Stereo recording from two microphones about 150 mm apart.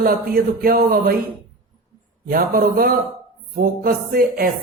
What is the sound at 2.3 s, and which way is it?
Speech, 70° right (ahead or behind).